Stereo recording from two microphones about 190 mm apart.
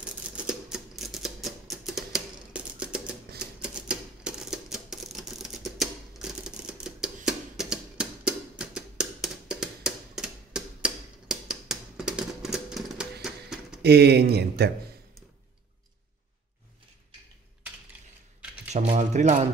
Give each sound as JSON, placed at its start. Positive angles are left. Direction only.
{"t": 0.0, "sound": "typewriter", "side_deg": -5}
{"t": 13.8, "sound": "speech", "side_deg": -60}
{"t": 18.7, "sound": "a sound", "side_deg": -35}